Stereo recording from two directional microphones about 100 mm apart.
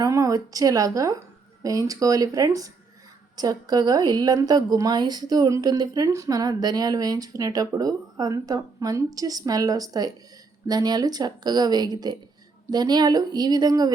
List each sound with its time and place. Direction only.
0.0 s a woman's voice: 35° right (ahead or behind)